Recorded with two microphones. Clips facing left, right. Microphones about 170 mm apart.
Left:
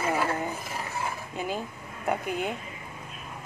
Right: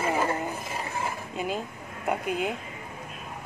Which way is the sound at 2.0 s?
Centre (ahead or behind).